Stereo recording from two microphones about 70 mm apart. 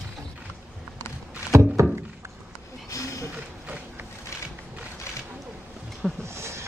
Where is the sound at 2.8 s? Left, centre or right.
Left.